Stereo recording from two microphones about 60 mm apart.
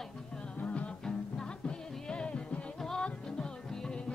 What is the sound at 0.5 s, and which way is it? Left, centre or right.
Music, left.